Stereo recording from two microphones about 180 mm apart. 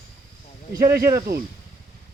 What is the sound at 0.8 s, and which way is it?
Speech, 55° right (ahead or behind).